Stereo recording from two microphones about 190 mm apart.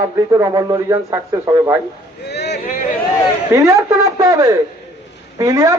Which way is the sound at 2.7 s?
45° left (ahead or behind).